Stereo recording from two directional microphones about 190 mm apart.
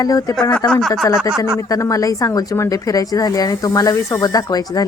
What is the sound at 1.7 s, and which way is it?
A woman's voice, 20° left (ahead or behind).